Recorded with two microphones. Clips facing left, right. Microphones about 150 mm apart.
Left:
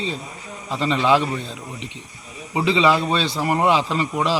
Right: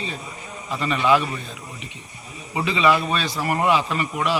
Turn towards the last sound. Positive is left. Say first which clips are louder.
# left 2 dB
turn(degrees=25)  # may be behind; listen again after turning